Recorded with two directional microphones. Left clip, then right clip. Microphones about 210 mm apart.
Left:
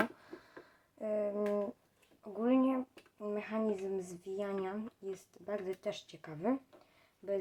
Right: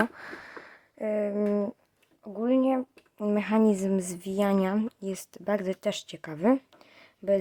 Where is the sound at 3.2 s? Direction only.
55° right (ahead or behind).